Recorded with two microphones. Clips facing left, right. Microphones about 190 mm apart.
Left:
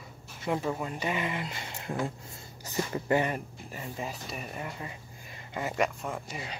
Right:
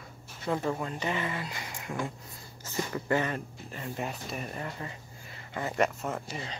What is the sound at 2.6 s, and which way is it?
Speech, 15° left (ahead or behind).